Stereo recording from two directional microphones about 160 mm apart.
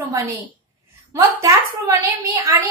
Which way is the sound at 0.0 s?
20° right (ahead or behind).